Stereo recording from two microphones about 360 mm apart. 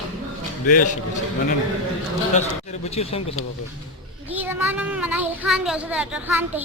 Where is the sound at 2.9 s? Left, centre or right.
Centre.